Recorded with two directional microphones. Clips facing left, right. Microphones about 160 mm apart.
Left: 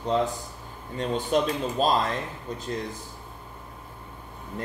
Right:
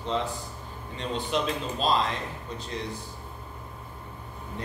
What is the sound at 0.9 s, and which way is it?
Speech, 45° left (ahead or behind).